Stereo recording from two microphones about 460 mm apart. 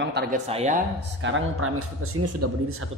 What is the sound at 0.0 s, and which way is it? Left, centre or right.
Speech, centre.